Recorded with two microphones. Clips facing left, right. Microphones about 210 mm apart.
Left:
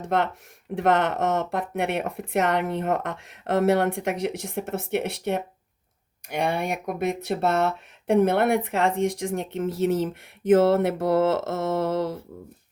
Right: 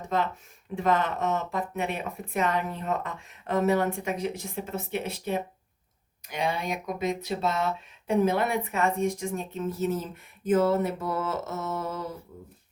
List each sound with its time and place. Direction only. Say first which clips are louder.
0.1 s speech: left 4 dB; 75° left (ahead or behind); by 10.1 s 90° left
10.5 s mantra: left 5 dB; 85° left